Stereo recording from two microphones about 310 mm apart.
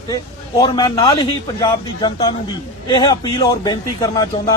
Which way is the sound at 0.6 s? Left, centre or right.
Centre.